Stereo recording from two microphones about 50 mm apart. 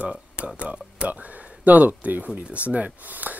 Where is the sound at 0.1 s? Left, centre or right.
Right.